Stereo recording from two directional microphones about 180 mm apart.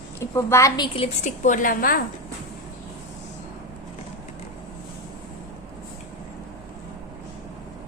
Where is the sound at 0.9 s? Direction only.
35° left (ahead or behind).